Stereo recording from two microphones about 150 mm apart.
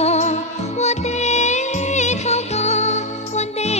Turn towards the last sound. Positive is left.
turn(degrees=45)  # may be behind; listen again after turning